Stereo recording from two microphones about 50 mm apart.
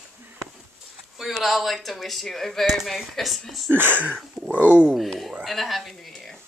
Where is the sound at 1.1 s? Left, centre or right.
Centre.